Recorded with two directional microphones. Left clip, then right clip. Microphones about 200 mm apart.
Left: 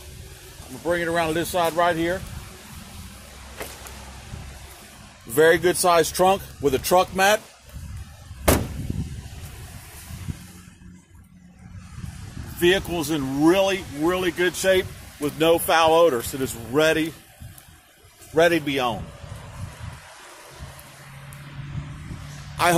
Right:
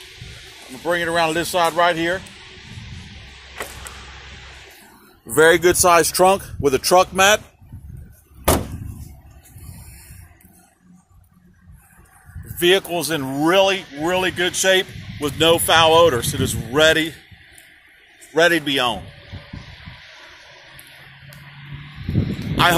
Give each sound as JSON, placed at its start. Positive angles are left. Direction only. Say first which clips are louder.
{"t": 0.8, "sound": "speech", "louder": "right 4 dB", "side_deg": -25}
{"t": 5.3, "sound": "speech", "louder": "right 4 dB", "side_deg": -35}
{"t": 12.5, "sound": "speech", "louder": "right 4 dB", "side_deg": -60}
{"t": 18.3, "sound": "speech", "louder": "right 3 dB", "side_deg": -30}
{"t": 22.6, "sound": "a man's voice", "louder": "right 4 dB", "side_deg": 0}